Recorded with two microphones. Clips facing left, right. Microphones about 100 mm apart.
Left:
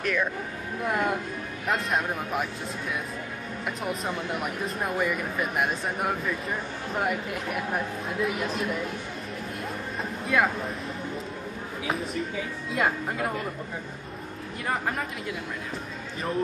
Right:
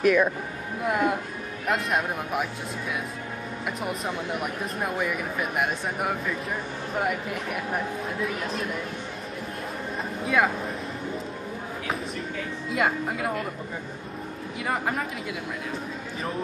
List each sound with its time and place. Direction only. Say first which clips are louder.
0.0 s speech: right 7 dB; 10° right (ahead or behind)
3.6 s speech: even; centre (ahead or behind)
10.2 s speech: right 1 dB; centre (ahead or behind)
12.7 s speech: right 1 dB; centre (ahead or behind)
14.7 s speech: right 1 dB; centre (ahead or behind)